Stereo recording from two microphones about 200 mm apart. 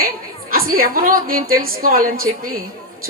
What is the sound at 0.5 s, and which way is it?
A woman's voice, 45° right (ahead or behind).